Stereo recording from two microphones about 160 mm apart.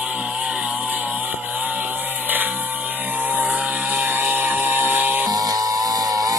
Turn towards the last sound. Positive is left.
turn(degrees=-25)  # may be behind; listen again after turning